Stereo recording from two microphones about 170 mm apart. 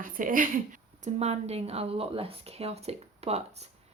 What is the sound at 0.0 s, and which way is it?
A woman's voice, 55° right (ahead or behind).